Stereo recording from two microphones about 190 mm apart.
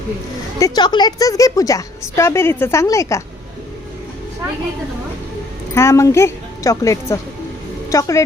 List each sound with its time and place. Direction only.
0.6 s a woman's voice: 25° left (ahead or behind)
5.7 s a woman's voice: 15° left (ahead or behind)